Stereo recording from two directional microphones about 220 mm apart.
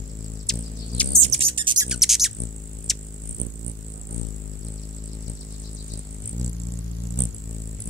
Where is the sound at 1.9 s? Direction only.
Centre (ahead or behind).